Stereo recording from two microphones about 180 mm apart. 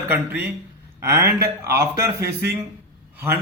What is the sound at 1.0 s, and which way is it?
Speech, 15° right (ahead or behind).